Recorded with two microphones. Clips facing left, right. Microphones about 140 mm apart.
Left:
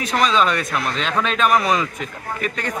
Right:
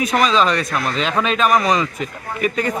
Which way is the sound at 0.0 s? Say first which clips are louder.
Right 2 dB; 5° right (ahead or behind).